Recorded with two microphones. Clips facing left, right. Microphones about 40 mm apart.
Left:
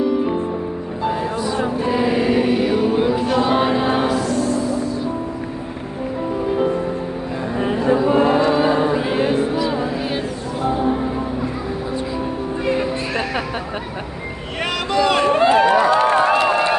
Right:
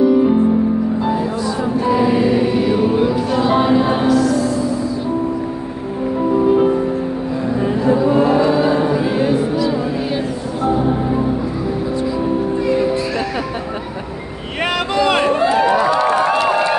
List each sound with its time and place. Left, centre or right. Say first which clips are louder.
3.3 s music: right 5 dB; centre
6.3 s music: right 7 dB; centre
7.6 s a sound: right 1 dB; left
8.4 s music: right 2 dB; centre
15.0 s run: right 1 dB; right
15.9 s run: even; left